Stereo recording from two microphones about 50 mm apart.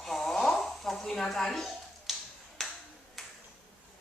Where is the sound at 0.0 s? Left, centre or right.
Centre.